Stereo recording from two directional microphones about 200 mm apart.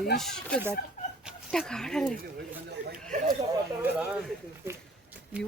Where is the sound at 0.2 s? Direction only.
5° left (ahead or behind).